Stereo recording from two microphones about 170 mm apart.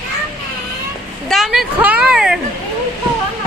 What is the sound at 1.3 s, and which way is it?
Speech, centre (ahead or behind).